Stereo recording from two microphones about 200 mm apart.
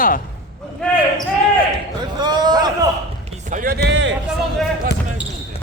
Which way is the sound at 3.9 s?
65° right (ahead or behind).